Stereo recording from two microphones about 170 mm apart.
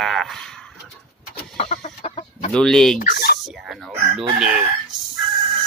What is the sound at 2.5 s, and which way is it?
Speech, 5° left (ahead or behind).